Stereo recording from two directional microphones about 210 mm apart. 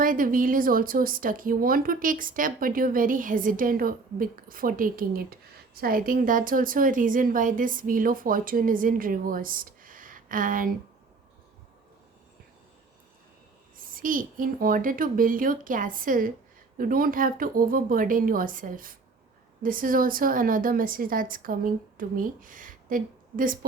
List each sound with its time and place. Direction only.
0.0 s speech: 40° right (ahead or behind)
13.7 s speech: 40° right (ahead or behind)